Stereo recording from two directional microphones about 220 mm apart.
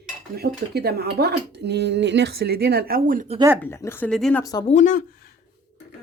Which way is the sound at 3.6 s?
10° left (ahead or behind).